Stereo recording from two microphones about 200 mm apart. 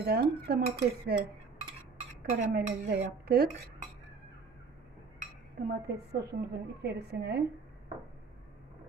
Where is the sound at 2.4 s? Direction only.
50° right (ahead or behind).